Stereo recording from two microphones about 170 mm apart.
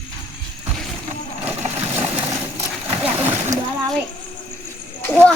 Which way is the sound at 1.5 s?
40° right (ahead or behind).